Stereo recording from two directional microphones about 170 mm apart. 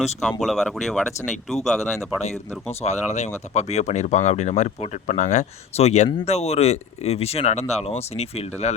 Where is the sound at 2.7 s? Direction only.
40° left (ahead or behind).